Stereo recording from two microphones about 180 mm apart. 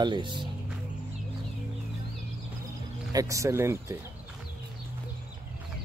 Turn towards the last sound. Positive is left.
turn(degrees=-15)  # may be behind; listen again after turning